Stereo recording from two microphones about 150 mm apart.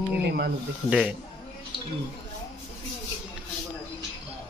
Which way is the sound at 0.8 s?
5° right (ahead or behind).